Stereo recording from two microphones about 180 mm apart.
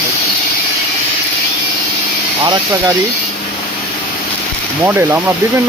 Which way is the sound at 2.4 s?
25° right (ahead or behind).